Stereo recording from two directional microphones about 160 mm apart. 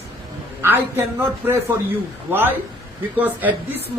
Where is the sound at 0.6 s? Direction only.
10° right (ahead or behind).